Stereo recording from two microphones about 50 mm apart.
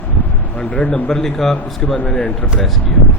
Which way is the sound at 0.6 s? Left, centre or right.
Left.